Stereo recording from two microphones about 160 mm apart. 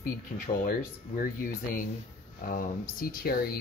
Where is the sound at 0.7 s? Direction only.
60° left (ahead or behind).